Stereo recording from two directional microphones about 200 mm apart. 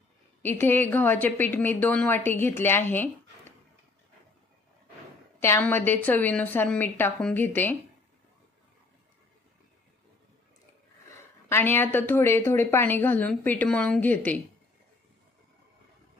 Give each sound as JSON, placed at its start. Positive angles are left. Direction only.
{"t": 0.4, "sound": "speech", "side_deg": 10}
{"t": 5.4, "sound": "speech", "side_deg": 10}
{"t": 11.1, "sound": "speech", "side_deg": 10}